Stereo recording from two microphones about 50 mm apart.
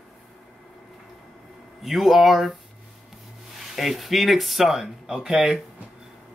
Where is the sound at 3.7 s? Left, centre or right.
Centre.